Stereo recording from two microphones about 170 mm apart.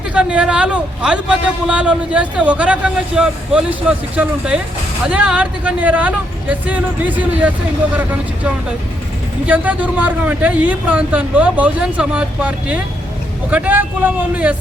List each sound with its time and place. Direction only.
0.1 s speech: 5° right (ahead or behind)
9.5 s speech: 10° right (ahead or behind)